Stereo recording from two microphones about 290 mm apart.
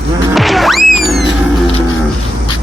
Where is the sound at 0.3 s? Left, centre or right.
Centre.